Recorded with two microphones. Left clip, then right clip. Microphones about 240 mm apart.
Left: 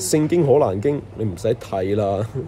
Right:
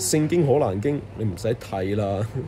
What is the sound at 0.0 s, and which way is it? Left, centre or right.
Speech, centre.